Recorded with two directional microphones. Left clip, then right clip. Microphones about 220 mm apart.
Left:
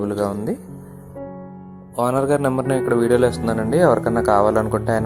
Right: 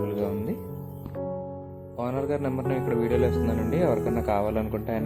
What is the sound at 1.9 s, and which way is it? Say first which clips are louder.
Speech: left 10 dB; 40° left (ahead or behind).